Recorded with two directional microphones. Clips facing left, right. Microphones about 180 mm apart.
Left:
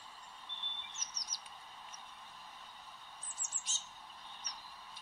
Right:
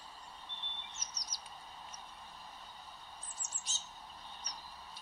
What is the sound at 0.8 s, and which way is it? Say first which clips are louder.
Chirp: right 2 dB; 35° right (ahead or behind).